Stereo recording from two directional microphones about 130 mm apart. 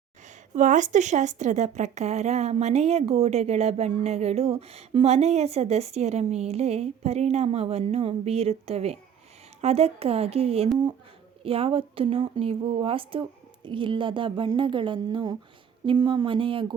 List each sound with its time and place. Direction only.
0.5 s a woman's voice: 70° right (ahead or behind); by 16.7 s 40° right (ahead or behind)